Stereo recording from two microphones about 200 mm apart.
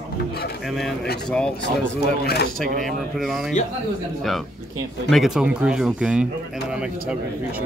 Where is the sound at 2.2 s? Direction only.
55° left (ahead or behind).